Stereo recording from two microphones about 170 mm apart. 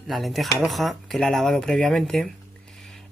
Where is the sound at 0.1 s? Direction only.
Centre (ahead or behind).